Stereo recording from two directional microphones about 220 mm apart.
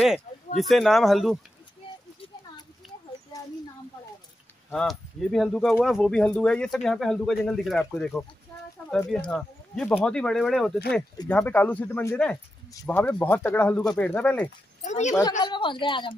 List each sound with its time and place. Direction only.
0.6 s speech: centre (ahead or behind)
4.6 s speech: centre (ahead or behind)
9.3 s speech: 5° left (ahead or behind)
14.8 s a woman's voice: 30° left (ahead or behind)
15.4 s a man's voice: 20° left (ahead or behind)